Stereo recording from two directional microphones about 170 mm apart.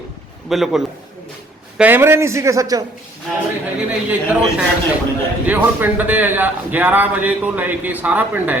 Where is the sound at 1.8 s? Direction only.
15° right (ahead or behind).